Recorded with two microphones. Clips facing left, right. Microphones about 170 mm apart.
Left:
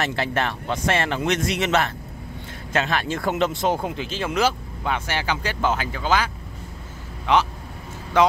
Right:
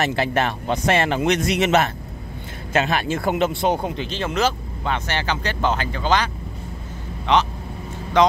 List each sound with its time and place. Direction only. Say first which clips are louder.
0.0 s speech: right 3 dB; 15° right (ahead or behind); by 8.3 s 5° left (ahead or behind)